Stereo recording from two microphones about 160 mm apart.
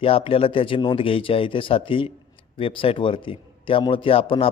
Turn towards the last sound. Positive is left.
turn(degrees=35)  # may be behind; listen again after turning